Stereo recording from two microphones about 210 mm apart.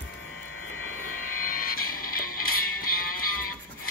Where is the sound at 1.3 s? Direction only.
40° left (ahead or behind).